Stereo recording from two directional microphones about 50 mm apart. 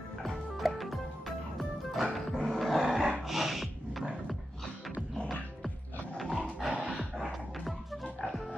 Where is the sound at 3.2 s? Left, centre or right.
Centre.